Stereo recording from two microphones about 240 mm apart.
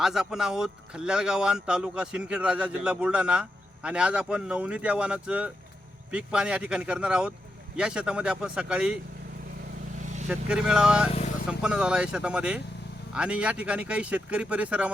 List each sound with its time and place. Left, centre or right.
0.0 s speech: centre
10.0 s vehicle: right
10.2 s speech: centre
11.1 s vehicle: left
11.4 s speech: centre